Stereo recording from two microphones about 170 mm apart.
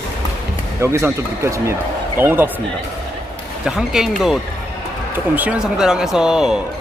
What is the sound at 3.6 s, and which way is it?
Speech, 5° right (ahead or behind).